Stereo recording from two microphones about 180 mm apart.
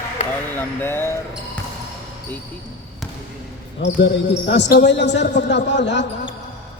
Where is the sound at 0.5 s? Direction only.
10° left (ahead or behind).